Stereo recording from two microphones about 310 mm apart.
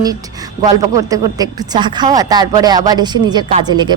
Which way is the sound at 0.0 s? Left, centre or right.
Centre.